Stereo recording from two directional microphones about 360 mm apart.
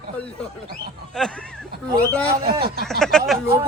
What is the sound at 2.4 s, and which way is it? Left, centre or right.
Speech, right.